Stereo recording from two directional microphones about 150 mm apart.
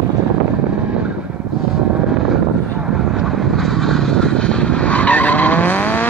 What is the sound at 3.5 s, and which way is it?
Vehicle, centre (ahead or behind).